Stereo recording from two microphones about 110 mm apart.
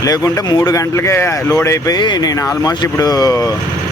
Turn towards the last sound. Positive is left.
turn(degrees=35)  # may be behind; listen again after turning